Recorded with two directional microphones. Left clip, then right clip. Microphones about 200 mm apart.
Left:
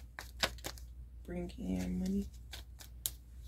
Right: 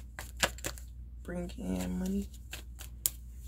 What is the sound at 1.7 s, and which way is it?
Scissors, 10° right (ahead or behind).